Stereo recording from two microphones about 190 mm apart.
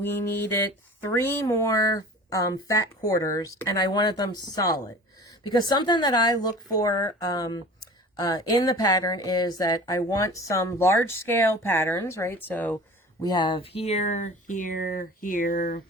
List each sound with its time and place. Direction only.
0.0 s speech: 10° left (ahead or behind)
13.2 s speech: 20° left (ahead or behind); by 15.8 s 45° left (ahead or behind)